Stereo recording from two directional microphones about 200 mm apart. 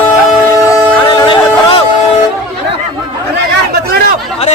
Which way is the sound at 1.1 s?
20° left (ahead or behind).